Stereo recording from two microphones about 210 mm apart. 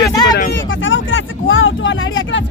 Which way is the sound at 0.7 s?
65° left (ahead or behind).